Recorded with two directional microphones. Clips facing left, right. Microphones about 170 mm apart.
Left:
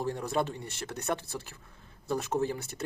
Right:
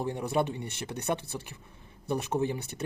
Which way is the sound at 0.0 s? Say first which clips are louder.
Right 2 dB; 15° right (ahead or behind).